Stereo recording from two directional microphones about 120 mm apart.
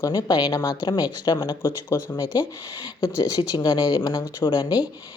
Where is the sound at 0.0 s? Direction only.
35° left (ahead or behind).